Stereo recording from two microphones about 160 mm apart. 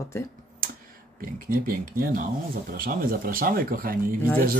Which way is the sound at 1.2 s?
65° right (ahead or behind).